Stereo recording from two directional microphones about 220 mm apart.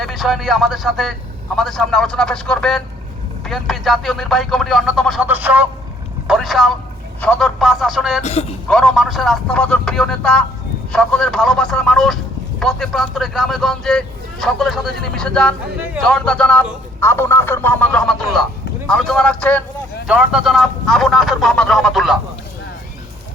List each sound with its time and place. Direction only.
0.0 s speech: centre (ahead or behind)
8.2 s a man's voice: 30° left (ahead or behind)
8.7 s speech: centre (ahead or behind)